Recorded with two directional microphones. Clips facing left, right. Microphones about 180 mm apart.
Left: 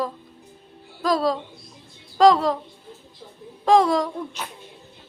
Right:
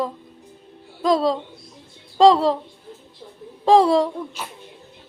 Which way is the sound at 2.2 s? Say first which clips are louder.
Right 2 dB; 30° right (ahead or behind).